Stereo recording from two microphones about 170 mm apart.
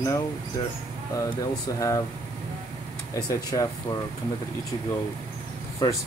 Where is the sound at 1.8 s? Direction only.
20° left (ahead or behind).